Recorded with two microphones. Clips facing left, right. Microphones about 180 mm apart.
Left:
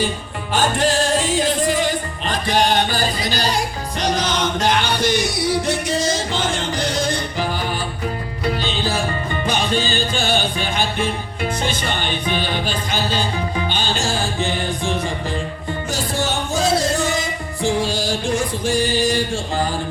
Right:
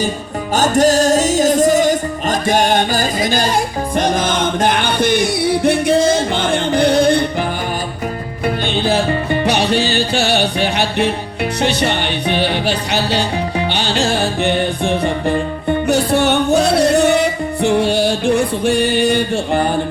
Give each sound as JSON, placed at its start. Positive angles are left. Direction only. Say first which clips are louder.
{"t": 0.5, "sound": "music", "louder": "right 6 dB", "side_deg": -40}
{"t": 8.6, "sound": "music", "louder": "right 6 dB", "side_deg": -60}